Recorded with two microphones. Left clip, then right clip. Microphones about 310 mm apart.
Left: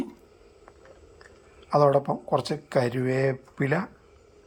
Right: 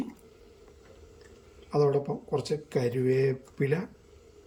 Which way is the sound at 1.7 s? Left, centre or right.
Left.